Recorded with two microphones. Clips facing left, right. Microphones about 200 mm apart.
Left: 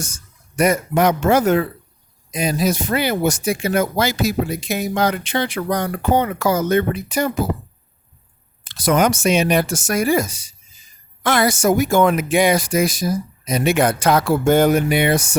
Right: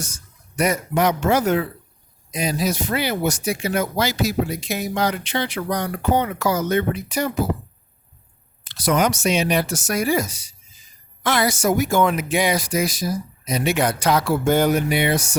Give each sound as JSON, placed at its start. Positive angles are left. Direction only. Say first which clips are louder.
{"t": 0.0, "sound": "speech", "louder": "left 3 dB", "side_deg": 50}
{"t": 8.6, "sound": "speech", "louder": "left 3 dB", "side_deg": 50}